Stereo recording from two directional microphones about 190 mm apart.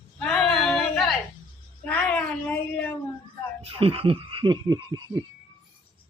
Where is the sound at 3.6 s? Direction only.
30° right (ahead or behind).